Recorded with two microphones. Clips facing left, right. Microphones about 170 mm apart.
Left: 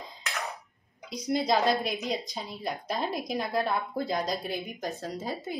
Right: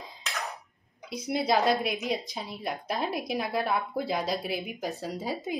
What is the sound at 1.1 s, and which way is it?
A woman's voice, 5° right (ahead or behind).